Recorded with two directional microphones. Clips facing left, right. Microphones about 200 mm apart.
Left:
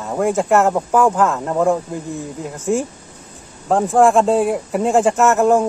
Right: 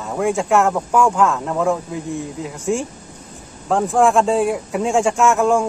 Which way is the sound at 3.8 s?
Centre (ahead or behind).